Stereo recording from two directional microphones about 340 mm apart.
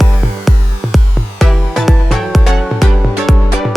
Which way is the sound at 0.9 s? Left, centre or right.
Centre.